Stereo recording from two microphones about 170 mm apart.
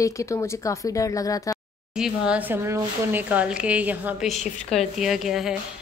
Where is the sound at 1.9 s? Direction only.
5° right (ahead or behind).